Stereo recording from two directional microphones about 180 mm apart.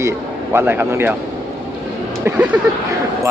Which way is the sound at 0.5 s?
10° right (ahead or behind).